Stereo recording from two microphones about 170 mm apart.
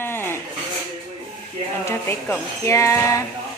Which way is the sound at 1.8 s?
15° left (ahead or behind).